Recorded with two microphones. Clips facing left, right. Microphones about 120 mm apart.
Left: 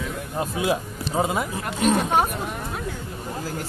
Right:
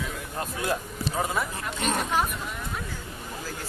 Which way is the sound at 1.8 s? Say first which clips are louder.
Left 7 dB; centre (ahead or behind).